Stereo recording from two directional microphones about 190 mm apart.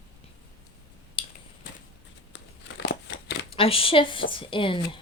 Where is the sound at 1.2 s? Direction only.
25° left (ahead or behind).